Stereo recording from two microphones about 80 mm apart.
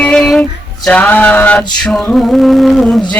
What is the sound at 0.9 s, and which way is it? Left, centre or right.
Mantra, centre.